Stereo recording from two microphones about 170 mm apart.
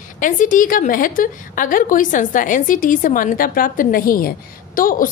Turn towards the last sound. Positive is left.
turn(degrees=55)  # may be behind; listen again after turning